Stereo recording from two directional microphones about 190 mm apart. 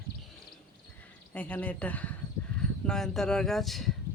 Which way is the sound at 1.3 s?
10° left (ahead or behind).